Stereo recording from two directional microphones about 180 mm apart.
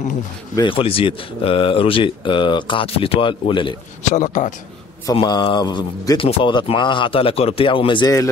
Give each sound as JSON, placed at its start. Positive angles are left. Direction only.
{"t": 0.6, "sound": "speech", "side_deg": 30}
{"t": 4.1, "sound": "a man's voice", "side_deg": 45}
{"t": 5.1, "sound": "speech", "side_deg": 25}